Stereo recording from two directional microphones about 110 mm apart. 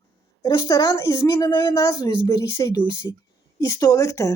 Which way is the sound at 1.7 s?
30° left (ahead or behind).